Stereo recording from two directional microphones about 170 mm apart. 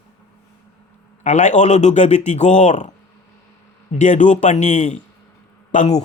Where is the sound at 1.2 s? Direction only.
45° left (ahead or behind).